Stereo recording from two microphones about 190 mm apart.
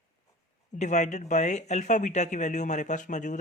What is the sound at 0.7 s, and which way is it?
Speech, 40° left (ahead or behind).